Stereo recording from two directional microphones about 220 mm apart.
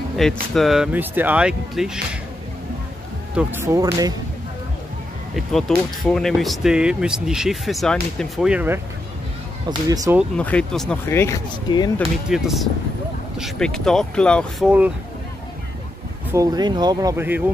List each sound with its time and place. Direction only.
0.2 s speech: centre (ahead or behind)
3.3 s speech: 10° right (ahead or behind)
5.3 s speech: centre (ahead or behind); by 10.1 s 15° right (ahead or behind)
10.3 s speech: 5° left (ahead or behind)
12.3 s speech: centre (ahead or behind)
16.3 s speech: 15° right (ahead or behind)